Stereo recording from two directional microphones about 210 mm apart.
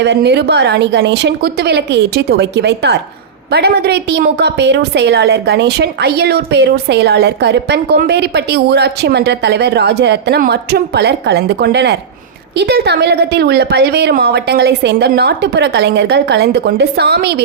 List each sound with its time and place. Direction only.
0.0 s a woman's voice: 55° right (ahead or behind)